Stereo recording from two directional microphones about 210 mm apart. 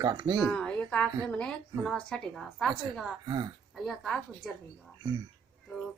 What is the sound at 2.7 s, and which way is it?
Speech, 20° right (ahead or behind).